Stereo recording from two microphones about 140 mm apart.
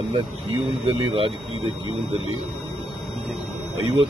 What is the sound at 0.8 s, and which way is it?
Speech, 40° right (ahead or behind).